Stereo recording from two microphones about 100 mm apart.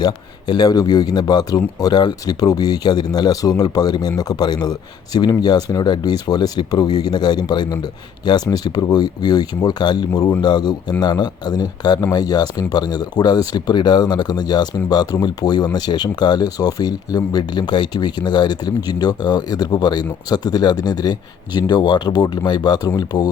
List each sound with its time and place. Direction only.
0.0 s speech: 45° left (ahead or behind)